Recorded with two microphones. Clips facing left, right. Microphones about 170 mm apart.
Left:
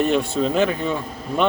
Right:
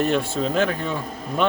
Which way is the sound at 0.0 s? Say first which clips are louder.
Left 2 dB; centre (ahead or behind).